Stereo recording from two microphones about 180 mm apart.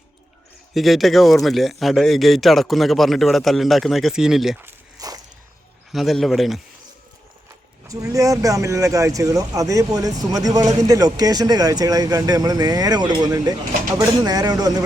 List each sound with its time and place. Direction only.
0.7 s speech: centre (ahead or behind)
4.6 s walk: 20° right (ahead or behind)
5.9 s speech: centre (ahead or behind)
7.9 s speech: 20° right (ahead or behind)